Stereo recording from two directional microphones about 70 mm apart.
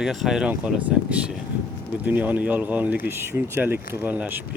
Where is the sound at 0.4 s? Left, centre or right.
Centre.